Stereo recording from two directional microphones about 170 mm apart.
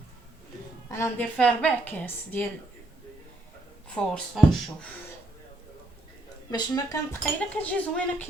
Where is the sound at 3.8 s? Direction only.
5° left (ahead or behind).